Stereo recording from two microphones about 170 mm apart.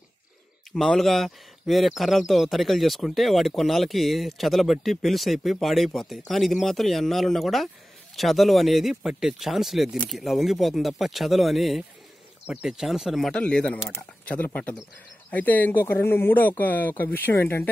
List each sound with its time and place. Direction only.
0.7 s speech: centre (ahead or behind)